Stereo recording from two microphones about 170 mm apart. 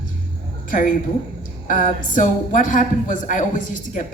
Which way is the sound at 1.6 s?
50° left (ahead or behind).